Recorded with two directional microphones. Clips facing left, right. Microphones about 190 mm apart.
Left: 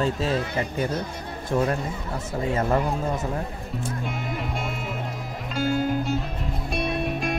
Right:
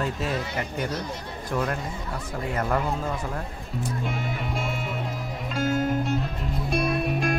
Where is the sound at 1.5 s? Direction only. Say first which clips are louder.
Left 4 dB; 25° left (ahead or behind).